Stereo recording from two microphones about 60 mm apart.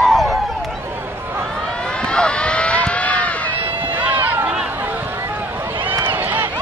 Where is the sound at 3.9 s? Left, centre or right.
Right.